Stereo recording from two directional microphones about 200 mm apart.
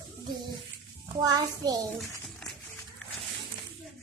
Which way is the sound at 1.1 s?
20° right (ahead or behind).